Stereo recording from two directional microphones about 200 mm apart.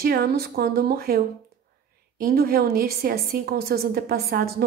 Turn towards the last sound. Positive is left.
turn(degrees=-50)  # may be behind; listen again after turning